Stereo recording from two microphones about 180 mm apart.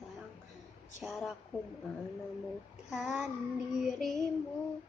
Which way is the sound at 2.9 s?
Centre (ahead or behind).